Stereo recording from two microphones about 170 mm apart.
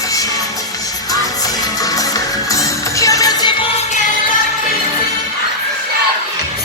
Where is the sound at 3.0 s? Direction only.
20° left (ahead or behind).